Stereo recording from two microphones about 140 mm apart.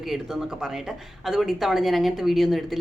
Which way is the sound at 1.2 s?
Centre (ahead or behind).